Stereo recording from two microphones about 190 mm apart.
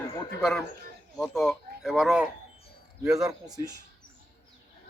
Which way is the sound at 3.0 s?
15° right (ahead or behind).